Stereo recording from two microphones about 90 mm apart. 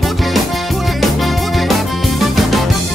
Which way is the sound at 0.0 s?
Centre (ahead or behind).